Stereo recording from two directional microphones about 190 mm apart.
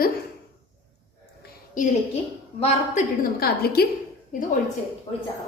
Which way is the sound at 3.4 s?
55° left (ahead or behind).